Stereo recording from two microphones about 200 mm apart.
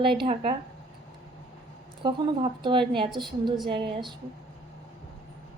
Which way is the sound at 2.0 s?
25° right (ahead or behind).